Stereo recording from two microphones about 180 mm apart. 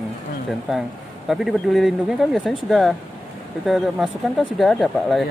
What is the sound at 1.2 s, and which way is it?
Speech, centre (ahead or behind).